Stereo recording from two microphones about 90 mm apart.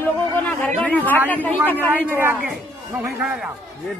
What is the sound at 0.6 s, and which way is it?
A man's voice, 15° left (ahead or behind).